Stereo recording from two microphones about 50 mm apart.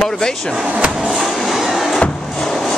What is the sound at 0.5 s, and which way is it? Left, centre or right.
Speech, centre.